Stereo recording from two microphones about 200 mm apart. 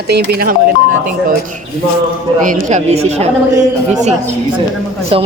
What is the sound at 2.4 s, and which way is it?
Speech, 40° right (ahead or behind).